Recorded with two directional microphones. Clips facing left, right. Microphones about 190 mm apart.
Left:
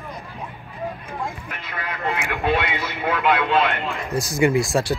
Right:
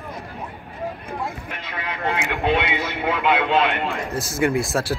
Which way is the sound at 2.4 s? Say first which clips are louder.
Right 1 dB; 15° right (ahead or behind).